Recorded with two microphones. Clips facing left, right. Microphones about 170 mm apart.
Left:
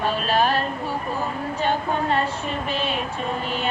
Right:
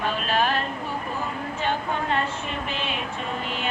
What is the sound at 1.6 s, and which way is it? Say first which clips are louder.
Music: left 4 dB; 35° left (ahead or behind).